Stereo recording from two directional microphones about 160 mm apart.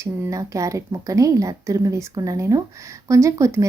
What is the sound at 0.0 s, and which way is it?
A woman's voice, 20° right (ahead or behind).